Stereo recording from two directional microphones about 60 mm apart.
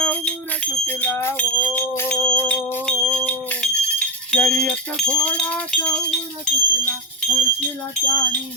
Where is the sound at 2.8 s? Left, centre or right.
Centre.